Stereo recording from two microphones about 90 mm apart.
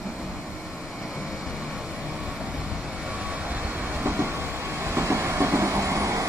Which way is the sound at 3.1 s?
15° right (ahead or behind).